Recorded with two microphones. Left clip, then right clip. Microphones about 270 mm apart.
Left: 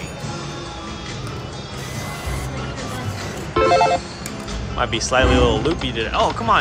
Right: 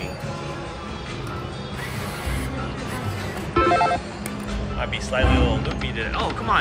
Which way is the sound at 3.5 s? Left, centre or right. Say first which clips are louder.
Left 4 dB; centre.